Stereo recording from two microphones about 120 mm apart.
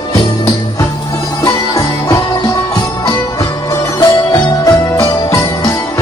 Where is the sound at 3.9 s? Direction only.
30° left (ahead or behind).